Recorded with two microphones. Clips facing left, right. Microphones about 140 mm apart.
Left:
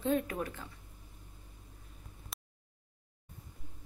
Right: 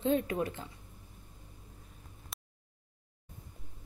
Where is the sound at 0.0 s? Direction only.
25° right (ahead or behind).